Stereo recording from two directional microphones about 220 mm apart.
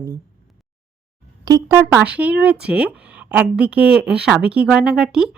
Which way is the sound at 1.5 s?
15° right (ahead or behind).